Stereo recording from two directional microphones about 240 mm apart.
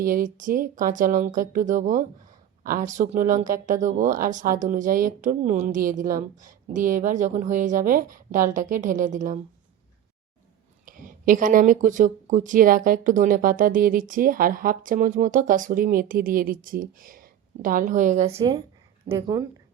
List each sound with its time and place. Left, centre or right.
0.0 s speech: right
10.8 s speech: right; by 19.5 s centre